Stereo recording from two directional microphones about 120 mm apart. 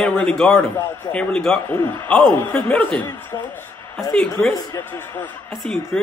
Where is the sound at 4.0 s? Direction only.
5° left (ahead or behind).